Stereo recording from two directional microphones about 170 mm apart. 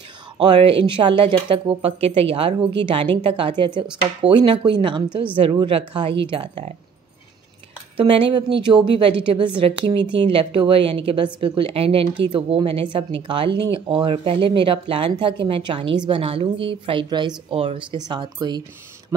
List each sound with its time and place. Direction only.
0.4 s speech: 30° right (ahead or behind)
8.0 s speech: 30° right (ahead or behind)